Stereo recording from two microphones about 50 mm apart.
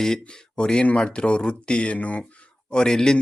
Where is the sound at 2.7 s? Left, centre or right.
Centre.